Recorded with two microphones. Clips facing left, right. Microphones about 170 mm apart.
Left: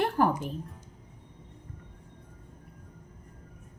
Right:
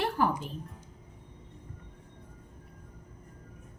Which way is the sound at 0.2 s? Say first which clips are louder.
Left 3 dB; 50° left (ahead or behind).